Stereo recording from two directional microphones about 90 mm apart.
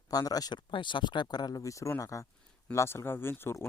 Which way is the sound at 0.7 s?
60° left (ahead or behind).